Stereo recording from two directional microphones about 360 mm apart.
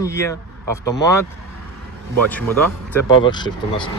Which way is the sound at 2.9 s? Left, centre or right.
Centre.